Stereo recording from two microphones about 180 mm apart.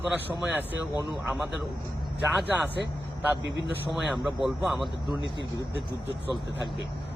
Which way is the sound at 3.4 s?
80° right.